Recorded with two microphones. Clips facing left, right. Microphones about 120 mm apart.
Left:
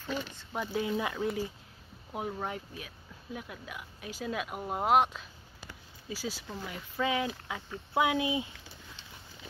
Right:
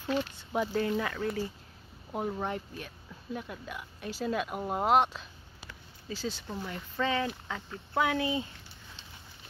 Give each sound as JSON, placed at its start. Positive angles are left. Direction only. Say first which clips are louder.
{"t": 0.0, "sound": "speech", "louder": "right 5 dB", "side_deg": -5}
{"t": 0.7, "sound": "speech", "louder": "right 1 dB", "side_deg": 10}
{"t": 2.3, "sound": "speech", "louder": "right 3 dB", "side_deg": 5}
{"t": 5.7, "sound": "a sound", "louder": "right 1 dB", "side_deg": 10}
{"t": 6.7, "sound": "speech", "louder": "even", "side_deg": 10}